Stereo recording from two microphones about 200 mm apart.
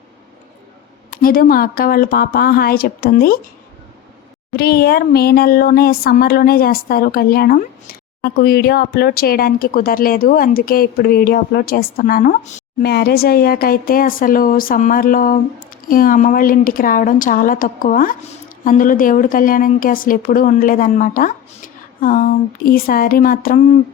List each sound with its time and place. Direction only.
1.1 s speech: 45° left (ahead or behind)
4.5 s speech: 50° left (ahead or behind)
12.8 s speech: 55° left (ahead or behind)